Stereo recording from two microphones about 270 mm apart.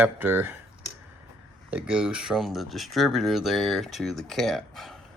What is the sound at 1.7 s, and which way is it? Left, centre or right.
Speech, centre.